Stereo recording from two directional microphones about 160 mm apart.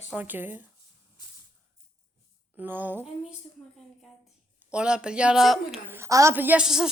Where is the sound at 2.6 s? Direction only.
10° right (ahead or behind).